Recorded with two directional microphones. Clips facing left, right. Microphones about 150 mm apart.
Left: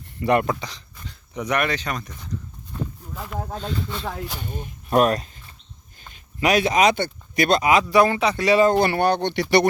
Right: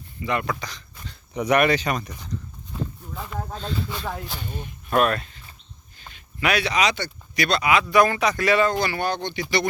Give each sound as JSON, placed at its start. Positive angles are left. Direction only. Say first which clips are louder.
{"t": 0.2, "sound": "speech", "louder": "left 7 dB", "side_deg": 60}
{"t": 0.4, "sound": "speech", "louder": "left 3 dB", "side_deg": 25}
{"t": 1.3, "sound": "speech", "louder": "right 4 dB", "side_deg": -5}
{"t": 3.8, "sound": "speech", "louder": "left 1 dB", "side_deg": -10}
{"t": 4.4, "sound": "speech", "louder": "left 1 dB", "side_deg": 45}
{"t": 6.4, "sound": "speech", "louder": "left 5 dB", "side_deg": 45}
{"t": 8.7, "sound": "speech", "louder": "left 6 dB", "side_deg": 55}